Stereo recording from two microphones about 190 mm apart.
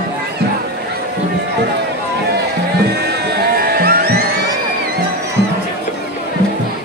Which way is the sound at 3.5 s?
50° right (ahead or behind).